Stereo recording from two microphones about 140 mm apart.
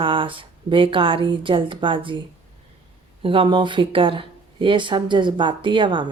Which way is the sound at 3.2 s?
40° right (ahead or behind).